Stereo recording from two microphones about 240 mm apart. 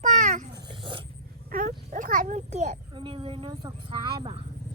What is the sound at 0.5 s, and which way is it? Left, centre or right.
Dog, centre.